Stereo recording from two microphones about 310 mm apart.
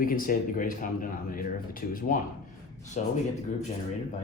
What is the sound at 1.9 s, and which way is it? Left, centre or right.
Speech, left.